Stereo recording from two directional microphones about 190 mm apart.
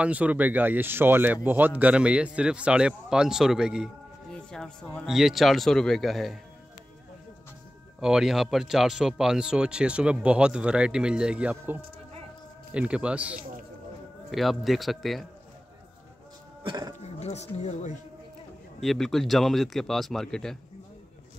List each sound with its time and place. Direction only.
0.0 s speech: 5° right (ahead or behind)
8.0 s speech: 5° right (ahead or behind)
16.6 s speech: 20° right (ahead or behind)
17.0 s speech: 35° left (ahead or behind)
18.8 s speech: centre (ahead or behind)